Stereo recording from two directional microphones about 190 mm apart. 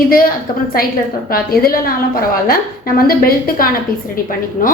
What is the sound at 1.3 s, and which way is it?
A woman's voice, 50° left (ahead or behind).